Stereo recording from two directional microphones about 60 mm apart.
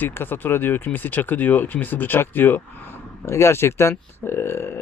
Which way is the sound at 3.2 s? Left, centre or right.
Left.